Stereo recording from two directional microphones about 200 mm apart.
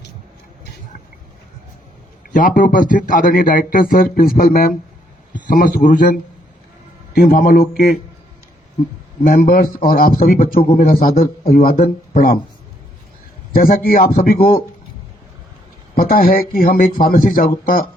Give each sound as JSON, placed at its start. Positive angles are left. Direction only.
{"t": 2.3, "sound": "a man's voice", "side_deg": 40}
{"t": 9.2, "sound": "speech", "side_deg": 45}
{"t": 13.5, "sound": "speech", "side_deg": 45}
{"t": 16.0, "sound": "speech", "side_deg": 45}